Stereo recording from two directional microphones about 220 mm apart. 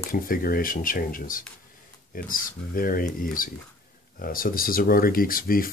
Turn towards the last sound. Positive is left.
turn(degrees=40)  # may be behind; listen again after turning